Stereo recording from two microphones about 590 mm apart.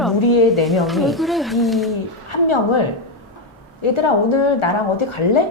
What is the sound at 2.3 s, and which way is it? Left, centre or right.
Speech, left.